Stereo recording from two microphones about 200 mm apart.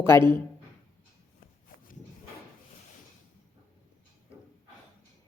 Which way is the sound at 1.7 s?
45° left (ahead or behind).